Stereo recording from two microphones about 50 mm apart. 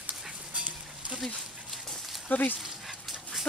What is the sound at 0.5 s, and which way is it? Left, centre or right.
Dog, right.